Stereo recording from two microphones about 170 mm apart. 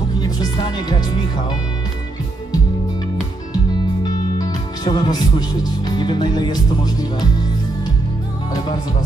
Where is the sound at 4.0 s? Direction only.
25° left (ahead or behind).